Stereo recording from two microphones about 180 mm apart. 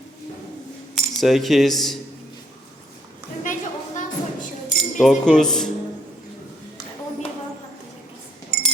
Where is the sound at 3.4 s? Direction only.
45° left (ahead or behind).